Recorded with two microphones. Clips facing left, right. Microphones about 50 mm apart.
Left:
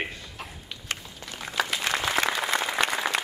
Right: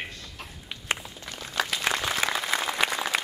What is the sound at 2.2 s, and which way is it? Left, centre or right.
Applause, centre.